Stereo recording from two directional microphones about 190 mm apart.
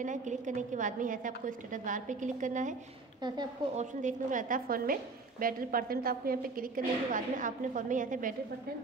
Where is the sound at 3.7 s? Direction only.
40° right (ahead or behind).